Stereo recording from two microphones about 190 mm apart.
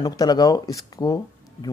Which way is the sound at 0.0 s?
20° left (ahead or behind).